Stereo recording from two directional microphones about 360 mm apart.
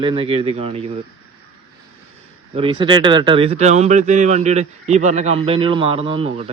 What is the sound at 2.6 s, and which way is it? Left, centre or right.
Speech, centre.